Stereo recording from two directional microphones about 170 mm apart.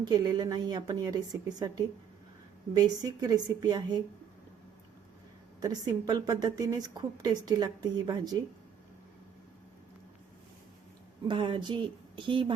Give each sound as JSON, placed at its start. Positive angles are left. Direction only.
{"t": 0.0, "sound": "a woman's voice", "side_deg": -25}
{"t": 5.5, "sound": "a woman's voice", "side_deg": -25}
{"t": 11.3, "sound": "a woman's voice", "side_deg": -30}